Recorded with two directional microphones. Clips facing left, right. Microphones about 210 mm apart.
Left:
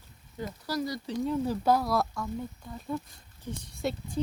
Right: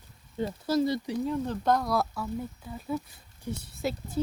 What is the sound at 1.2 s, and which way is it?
Speech, 5° left (ahead or behind).